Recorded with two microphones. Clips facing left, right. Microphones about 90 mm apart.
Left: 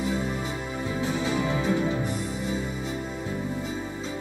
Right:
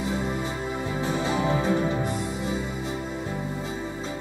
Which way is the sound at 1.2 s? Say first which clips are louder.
Right 3 dB; 35° right (ahead or behind).